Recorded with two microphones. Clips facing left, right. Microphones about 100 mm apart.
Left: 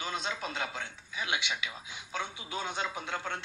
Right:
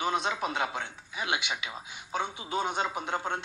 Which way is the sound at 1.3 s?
25° right (ahead or behind).